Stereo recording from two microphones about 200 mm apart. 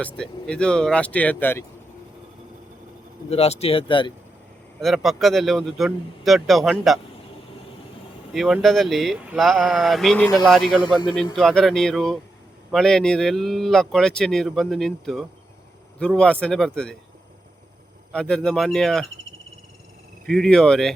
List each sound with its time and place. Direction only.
0.0 s speech: 5° left (ahead or behind)
3.2 s speech: 30° left (ahead or behind)
4.8 s speech: centre (ahead or behind)
8.3 s speech: 5° right (ahead or behind)
18.1 s speech: 5° left (ahead or behind)
20.2 s speech: centre (ahead or behind)